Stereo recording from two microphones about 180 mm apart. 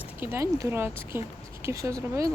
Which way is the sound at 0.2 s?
15° right (ahead or behind).